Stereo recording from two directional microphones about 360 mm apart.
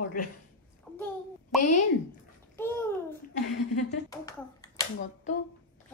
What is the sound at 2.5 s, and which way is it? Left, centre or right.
Babbling, centre.